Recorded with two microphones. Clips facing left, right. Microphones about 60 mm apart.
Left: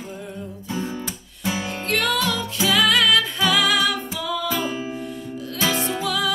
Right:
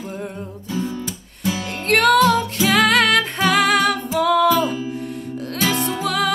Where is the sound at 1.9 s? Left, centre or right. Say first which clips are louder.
Right 8 dB; right.